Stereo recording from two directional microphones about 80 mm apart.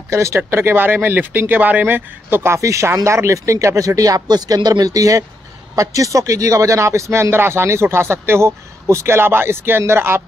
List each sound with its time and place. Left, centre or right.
0.1 s a man's voice: right